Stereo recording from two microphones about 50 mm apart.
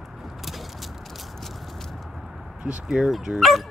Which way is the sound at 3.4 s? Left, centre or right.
Centre.